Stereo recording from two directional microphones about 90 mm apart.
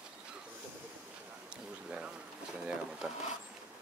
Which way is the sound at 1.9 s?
10° right (ahead or behind).